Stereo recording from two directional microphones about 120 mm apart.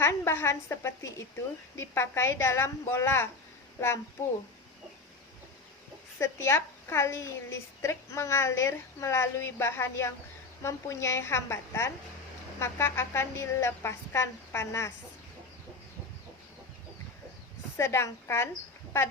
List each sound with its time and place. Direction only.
0.0 s a woman's voice: 20° left (ahead or behind)
6.1 s a woman's voice: 20° left (ahead or behind)
17.7 s a woman's voice: 20° left (ahead or behind)